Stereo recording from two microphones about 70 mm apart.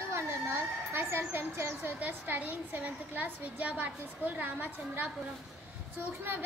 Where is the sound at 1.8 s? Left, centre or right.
Right.